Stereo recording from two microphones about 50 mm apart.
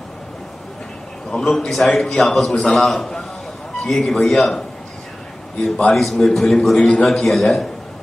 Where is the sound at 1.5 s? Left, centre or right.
Centre.